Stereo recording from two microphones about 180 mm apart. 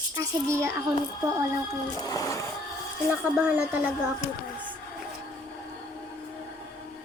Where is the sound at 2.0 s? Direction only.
20° left (ahead or behind).